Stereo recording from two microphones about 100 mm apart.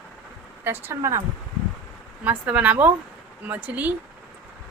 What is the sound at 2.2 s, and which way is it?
A woman's voice, 15° right (ahead or behind).